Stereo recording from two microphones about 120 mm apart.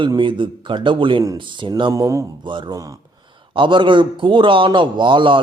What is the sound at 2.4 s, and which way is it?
A man's voice, 40° right (ahead or behind).